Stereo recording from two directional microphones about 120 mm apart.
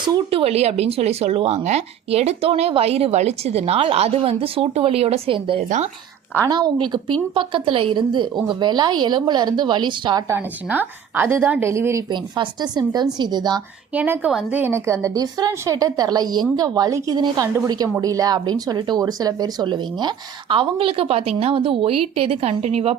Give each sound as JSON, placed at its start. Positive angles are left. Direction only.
{"t": 0.3, "sound": "speech", "side_deg": -55}
{"t": 5.6, "sound": "speech", "side_deg": -85}
{"t": 6.5, "sound": "a woman's voice", "side_deg": -40}
{"t": 10.2, "sound": "a woman's voice", "side_deg": -15}
{"t": 12.1, "sound": "a woman's voice", "side_deg": -40}
{"t": 13.9, "sound": "a woman's voice", "side_deg": -15}
{"t": 14.6, "sound": "a woman's voice", "side_deg": -25}